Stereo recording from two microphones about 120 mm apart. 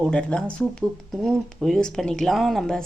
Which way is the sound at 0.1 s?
10° left (ahead or behind).